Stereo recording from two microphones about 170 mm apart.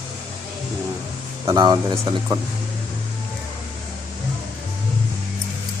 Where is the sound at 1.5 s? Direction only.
20° right (ahead or behind).